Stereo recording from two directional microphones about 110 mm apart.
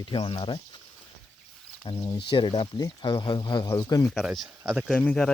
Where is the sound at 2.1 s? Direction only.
50° left (ahead or behind).